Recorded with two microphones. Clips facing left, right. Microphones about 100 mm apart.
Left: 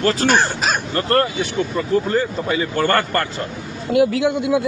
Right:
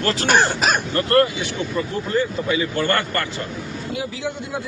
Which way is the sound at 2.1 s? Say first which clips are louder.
Left 1 dB; 40° left (ahead or behind).